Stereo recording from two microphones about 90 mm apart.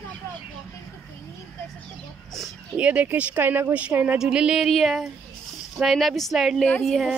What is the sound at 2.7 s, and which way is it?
Speech, 15° right (ahead or behind).